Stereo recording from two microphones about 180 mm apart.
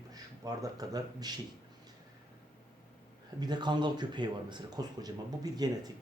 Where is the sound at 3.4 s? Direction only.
25° right (ahead or behind).